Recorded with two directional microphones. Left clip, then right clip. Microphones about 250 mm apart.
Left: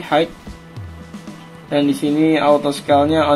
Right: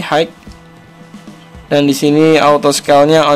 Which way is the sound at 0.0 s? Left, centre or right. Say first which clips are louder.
Right 3 dB; right.